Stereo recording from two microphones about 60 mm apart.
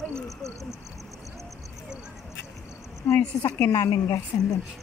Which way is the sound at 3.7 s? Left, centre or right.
Left.